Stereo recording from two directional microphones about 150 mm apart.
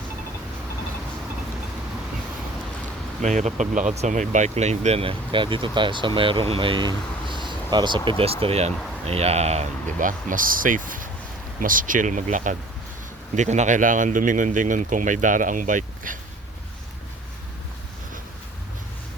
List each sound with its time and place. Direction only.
3.2 s speech: 55° right (ahead or behind); by 8.1 s 30° right (ahead or behind)
8.2 s speech: 40° right (ahead or behind); by 16.1 s 60° right (ahead or behind)